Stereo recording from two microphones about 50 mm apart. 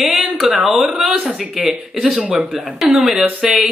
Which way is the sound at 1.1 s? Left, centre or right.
Right.